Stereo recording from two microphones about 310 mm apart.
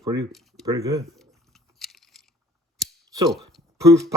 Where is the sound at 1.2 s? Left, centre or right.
Centre.